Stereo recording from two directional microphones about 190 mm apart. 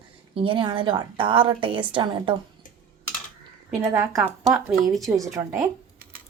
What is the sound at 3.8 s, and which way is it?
A woman's voice, 15° right (ahead or behind).